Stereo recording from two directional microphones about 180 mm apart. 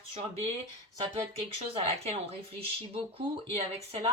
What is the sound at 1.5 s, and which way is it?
Speech, 35° right (ahead or behind).